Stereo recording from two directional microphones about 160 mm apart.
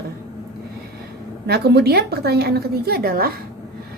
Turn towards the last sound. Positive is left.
turn(degrees=-70)  # may be behind; listen again after turning